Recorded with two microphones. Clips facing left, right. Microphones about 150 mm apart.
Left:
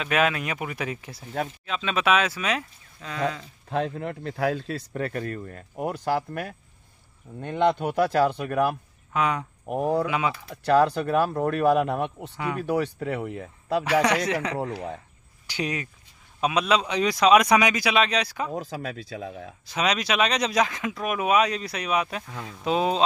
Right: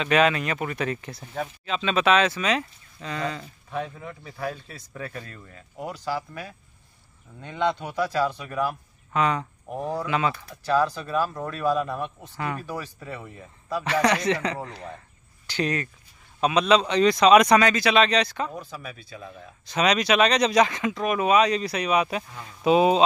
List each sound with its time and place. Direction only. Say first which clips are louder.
0.0 s a man's voice: right 3 dB; 5° left (ahead or behind)
3.6 s speech: left 6 dB; 70° left (ahead or behind)
9.1 s a man's voice: right 1 dB; 5° left (ahead or behind)
9.7 s speech: left 6 dB; 60° left (ahead or behind)
10.0 s a man's voice: right 1 dB; 10° left (ahead or behind)
10.5 s speech: left 5 dB; 65° left (ahead or behind)
14.0 s a man's voice: right 1 dB; 5° left (ahead or behind)
18.5 s speech: left 6 dB; 90° left
19.6 s speech: right 3 dB; 5° left (ahead or behind)
22.3 s speech: left 4 dB; 90° left
22.6 s speech: right 5 dB; 10° right (ahead or behind)